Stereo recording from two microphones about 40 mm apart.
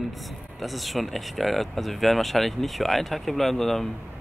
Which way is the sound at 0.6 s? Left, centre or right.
Centre.